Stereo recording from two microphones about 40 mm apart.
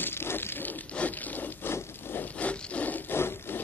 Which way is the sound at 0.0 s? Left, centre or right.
Left.